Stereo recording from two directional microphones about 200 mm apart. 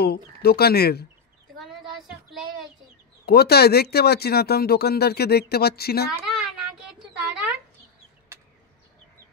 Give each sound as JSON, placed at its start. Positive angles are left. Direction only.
{"t": 0.0, "sound": "speech", "side_deg": 50}
{"t": 1.6, "sound": "child singing", "side_deg": 0}
{"t": 3.3, "sound": "speech", "side_deg": 50}
{"t": 6.1, "sound": "a sound", "side_deg": 0}